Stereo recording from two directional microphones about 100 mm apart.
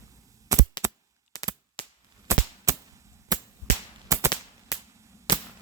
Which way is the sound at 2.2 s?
30° right (ahead or behind).